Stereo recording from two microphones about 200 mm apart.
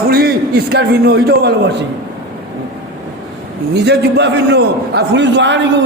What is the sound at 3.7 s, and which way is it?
Speech, 55° right (ahead or behind).